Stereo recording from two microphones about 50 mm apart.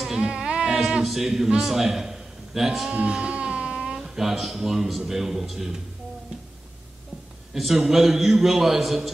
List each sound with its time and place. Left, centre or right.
0.2 s a sound: centre
0.7 s a man's voice: centre
2.9 s music: right
3.9 s a man's voice: centre
7.5 s a man's voice: centre